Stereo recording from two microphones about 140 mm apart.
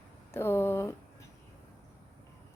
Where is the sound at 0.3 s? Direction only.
15° left (ahead or behind).